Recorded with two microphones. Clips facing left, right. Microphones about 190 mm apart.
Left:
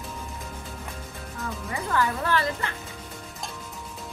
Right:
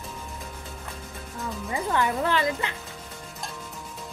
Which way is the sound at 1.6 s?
20° right (ahead or behind).